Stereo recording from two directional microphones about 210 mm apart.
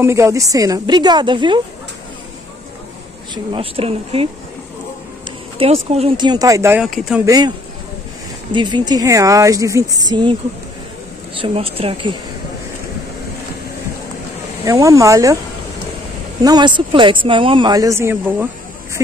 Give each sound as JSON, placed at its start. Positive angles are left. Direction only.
{"t": 0.0, "sound": "a woman's voice", "side_deg": -15}
{"t": 3.5, "sound": "speech", "side_deg": -25}
{"t": 5.6, "sound": "speech", "side_deg": -30}
{"t": 7.2, "sound": "speech", "side_deg": -20}
{"t": 11.4, "sound": "speech", "side_deg": -25}
{"t": 14.6, "sound": "a woman's voice", "side_deg": -15}
{"t": 16.4, "sound": "a woman's voice", "side_deg": -20}